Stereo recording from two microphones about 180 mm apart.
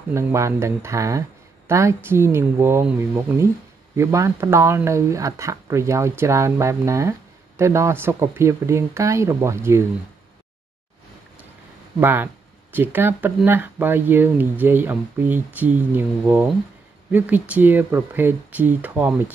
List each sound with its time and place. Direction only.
0.1 s speech: 15° right (ahead or behind)
12.0 s speech: 10° right (ahead or behind)